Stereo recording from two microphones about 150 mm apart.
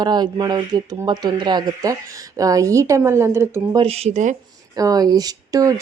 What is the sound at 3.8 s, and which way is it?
Speech, 45° right (ahead or behind).